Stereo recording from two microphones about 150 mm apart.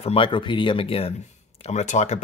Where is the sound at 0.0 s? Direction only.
40° left (ahead or behind).